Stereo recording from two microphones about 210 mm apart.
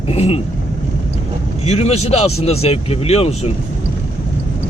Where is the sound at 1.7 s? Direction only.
30° left (ahead or behind).